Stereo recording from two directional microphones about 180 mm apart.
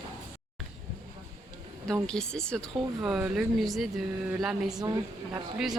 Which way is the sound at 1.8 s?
5° left (ahead or behind).